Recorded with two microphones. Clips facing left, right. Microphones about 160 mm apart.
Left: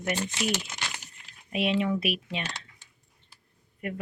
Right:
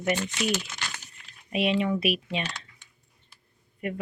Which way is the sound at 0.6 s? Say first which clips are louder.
Even; 20° left (ahead or behind).